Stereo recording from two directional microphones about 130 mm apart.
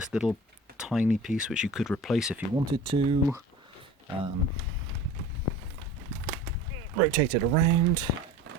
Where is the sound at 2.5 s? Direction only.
35° right (ahead or behind).